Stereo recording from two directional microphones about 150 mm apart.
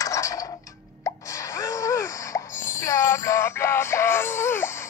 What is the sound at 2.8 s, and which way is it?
Synthetic singing, 20° left (ahead or behind).